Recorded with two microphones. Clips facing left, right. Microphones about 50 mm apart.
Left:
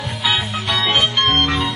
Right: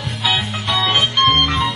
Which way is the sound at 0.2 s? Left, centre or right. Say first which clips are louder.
Even; centre.